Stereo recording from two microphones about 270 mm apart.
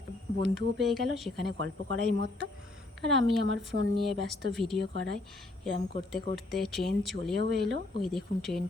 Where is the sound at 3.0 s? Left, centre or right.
Centre.